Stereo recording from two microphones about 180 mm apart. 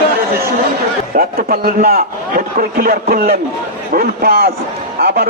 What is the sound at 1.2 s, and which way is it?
A man's voice, 55° right (ahead or behind).